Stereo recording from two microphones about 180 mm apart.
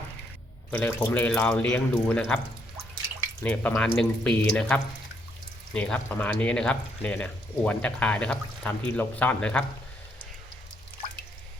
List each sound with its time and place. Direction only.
0.7 s speech: 10° left (ahead or behind)
3.4 s speech: 5° left (ahead or behind)